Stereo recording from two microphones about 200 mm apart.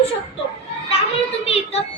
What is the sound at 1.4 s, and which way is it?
Music, 30° left (ahead or behind).